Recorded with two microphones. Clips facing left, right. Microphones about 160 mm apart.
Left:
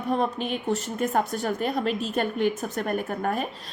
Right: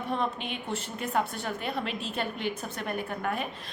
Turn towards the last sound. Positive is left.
turn(degrees=40)  # may be behind; listen again after turning